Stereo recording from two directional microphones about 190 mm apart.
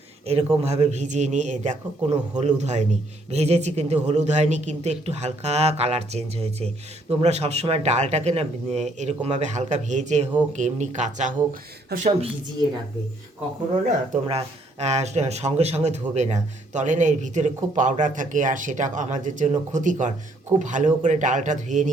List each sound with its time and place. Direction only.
0.3 s a man's voice: 35° right (ahead or behind)
11.9 s a woman's voice: 55° right (ahead or behind)
14.1 s a man's voice: 35° right (ahead or behind)